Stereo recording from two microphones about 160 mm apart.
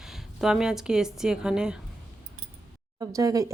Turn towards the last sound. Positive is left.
turn(degrees=-20)  # may be behind; listen again after turning